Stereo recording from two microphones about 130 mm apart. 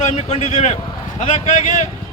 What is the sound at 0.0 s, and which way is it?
Speech, 60° left (ahead or behind).